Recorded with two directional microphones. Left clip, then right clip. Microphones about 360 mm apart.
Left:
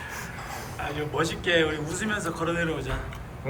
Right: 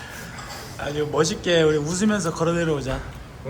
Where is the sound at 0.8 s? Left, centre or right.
Centre.